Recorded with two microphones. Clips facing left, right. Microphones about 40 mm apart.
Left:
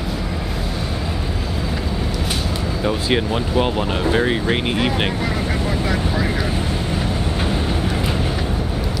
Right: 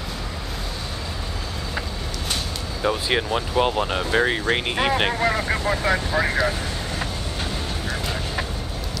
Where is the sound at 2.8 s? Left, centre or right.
Centre.